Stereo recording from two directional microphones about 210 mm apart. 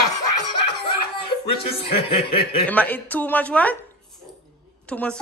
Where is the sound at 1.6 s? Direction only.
25° left (ahead or behind).